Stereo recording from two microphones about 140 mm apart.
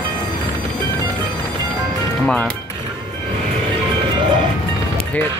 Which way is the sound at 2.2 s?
10° left (ahead or behind).